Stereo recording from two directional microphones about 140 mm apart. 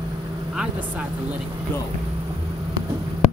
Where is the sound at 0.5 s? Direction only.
10° right (ahead or behind).